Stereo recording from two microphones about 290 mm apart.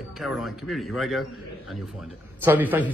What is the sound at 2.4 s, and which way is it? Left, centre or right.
Speech, centre.